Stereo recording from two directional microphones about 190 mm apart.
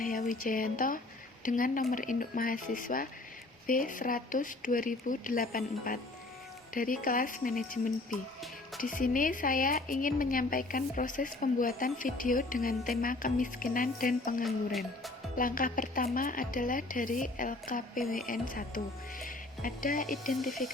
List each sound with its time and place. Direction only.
0.0 s speech: 45° left (ahead or behind)
14.4 s music: centre (ahead or behind)
15.4 s speech: 45° left (ahead or behind)